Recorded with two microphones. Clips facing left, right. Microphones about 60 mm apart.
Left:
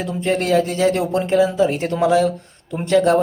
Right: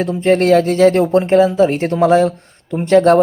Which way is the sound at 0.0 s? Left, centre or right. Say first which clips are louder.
Right 7 dB; right.